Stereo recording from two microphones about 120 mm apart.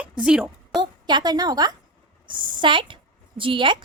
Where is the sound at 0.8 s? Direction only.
35° right (ahead or behind).